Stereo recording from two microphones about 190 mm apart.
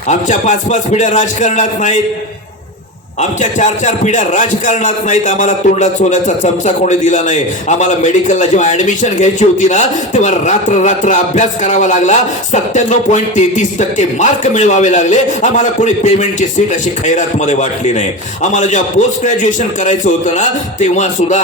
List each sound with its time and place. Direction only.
0.1 s a man's voice: 40° left (ahead or behind)
3.2 s a man's voice: 40° left (ahead or behind)